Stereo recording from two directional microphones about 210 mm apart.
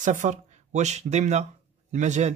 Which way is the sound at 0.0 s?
35° right (ahead or behind).